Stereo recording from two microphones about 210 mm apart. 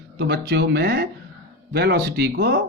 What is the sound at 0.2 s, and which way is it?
Speech, 50° right (ahead or behind).